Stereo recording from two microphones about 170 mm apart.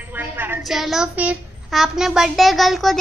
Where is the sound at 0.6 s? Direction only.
Centre (ahead or behind).